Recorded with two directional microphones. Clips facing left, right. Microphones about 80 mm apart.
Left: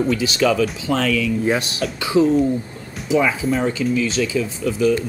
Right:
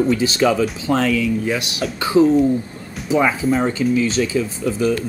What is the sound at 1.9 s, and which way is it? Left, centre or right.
Speech, right.